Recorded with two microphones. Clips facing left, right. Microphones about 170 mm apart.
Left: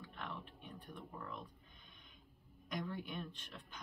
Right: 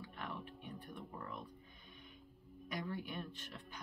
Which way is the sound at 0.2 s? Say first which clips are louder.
Right 2 dB; 5° right (ahead or behind).